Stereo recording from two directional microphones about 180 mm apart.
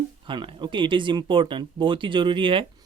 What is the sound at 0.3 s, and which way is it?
Speech, 25° right (ahead or behind).